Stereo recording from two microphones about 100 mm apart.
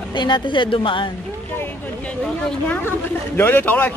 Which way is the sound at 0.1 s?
50° left (ahead or behind).